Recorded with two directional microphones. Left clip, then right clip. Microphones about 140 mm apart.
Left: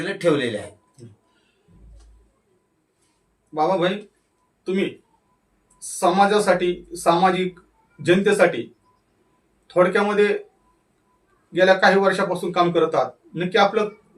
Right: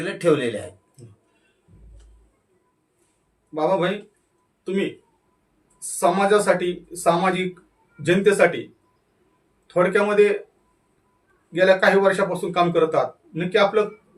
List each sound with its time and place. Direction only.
0.0 s speech: 25° right (ahead or behind)
3.5 s a man's voice: 5° left (ahead or behind)
6.0 s a man's voice: 5° left (ahead or behind)
9.7 s a man's voice: 5° left (ahead or behind)
11.5 s a man's voice: 5° left (ahead or behind)